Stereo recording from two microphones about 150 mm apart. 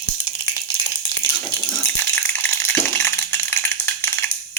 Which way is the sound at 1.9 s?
15° left (ahead or behind).